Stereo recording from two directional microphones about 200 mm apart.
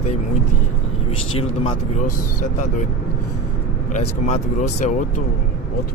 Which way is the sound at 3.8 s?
35° left (ahead or behind).